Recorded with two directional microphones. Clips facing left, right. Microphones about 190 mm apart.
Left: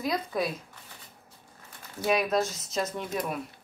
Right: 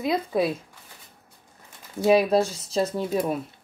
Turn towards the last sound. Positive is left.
turn(degrees=-30)  # may be behind; listen again after turning